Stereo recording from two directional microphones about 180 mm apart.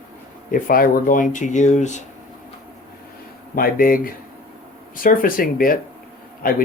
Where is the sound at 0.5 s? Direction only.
50° left (ahead or behind).